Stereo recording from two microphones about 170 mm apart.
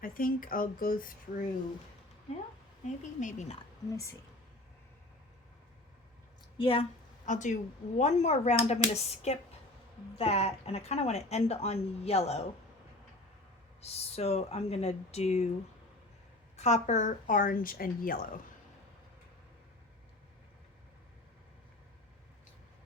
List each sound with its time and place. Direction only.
0.0 s speech: 55° left (ahead or behind)
2.8 s a woman's voice: 45° left (ahead or behind)
6.6 s speech: 35° left (ahead or behind)
7.3 s speech: 45° left (ahead or behind)
13.8 s speech: 35° left (ahead or behind)
16.6 s a woman's voice: 40° left (ahead or behind); by 18.2 s 55° left (ahead or behind)